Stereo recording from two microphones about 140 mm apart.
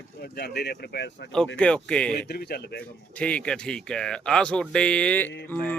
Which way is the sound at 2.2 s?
90° left.